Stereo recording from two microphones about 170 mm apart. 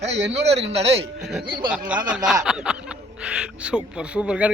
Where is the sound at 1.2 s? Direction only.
Centre (ahead or behind).